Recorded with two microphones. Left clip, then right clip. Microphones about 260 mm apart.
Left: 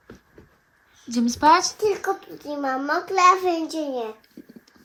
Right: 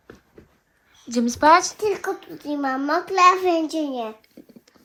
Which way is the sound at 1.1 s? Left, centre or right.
Centre.